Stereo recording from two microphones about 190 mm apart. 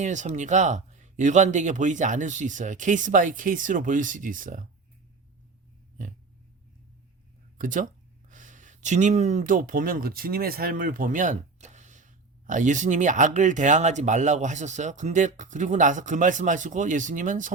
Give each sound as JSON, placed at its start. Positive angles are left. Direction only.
{"t": 0.0, "sound": "speech", "side_deg": -40}
{"t": 7.6, "sound": "speech", "side_deg": -45}